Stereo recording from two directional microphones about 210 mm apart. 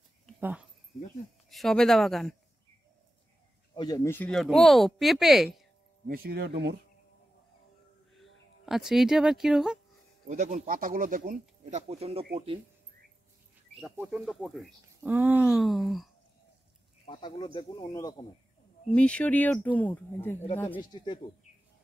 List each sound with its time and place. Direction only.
0.4 s speech: 5° right (ahead or behind)
3.7 s speech: 20° left (ahead or behind); by 5.6 s centre (ahead or behind)
6.0 s speech: 45° right (ahead or behind)
8.6 s speech: centre (ahead or behind)
10.2 s speech: 35° right (ahead or behind)
13.7 s speech: 5° right (ahead or behind)
17.0 s speech: 25° left (ahead or behind)
18.9 s speech: 5° left (ahead or behind)
20.8 s speech: 20° left (ahead or behind)